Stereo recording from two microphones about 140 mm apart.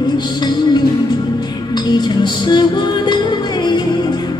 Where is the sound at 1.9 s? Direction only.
30° left (ahead or behind).